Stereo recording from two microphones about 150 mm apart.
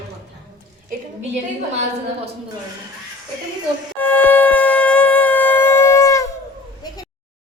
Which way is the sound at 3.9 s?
10° left (ahead or behind).